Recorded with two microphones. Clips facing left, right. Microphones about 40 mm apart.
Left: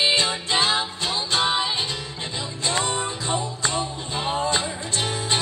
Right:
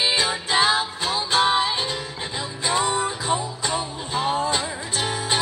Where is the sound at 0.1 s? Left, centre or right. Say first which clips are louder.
Even; centre.